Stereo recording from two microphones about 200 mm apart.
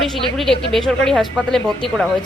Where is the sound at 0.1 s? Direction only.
Centre (ahead or behind).